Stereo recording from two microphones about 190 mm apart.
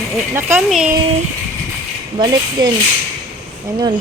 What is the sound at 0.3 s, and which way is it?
Speech, 10° right (ahead or behind).